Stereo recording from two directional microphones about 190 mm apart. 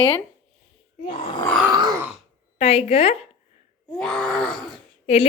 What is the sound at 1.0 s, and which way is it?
Speech, 30° left (ahead or behind).